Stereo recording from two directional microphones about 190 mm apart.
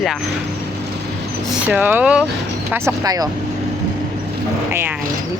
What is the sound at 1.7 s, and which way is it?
Speech, 10° right (ahead or behind).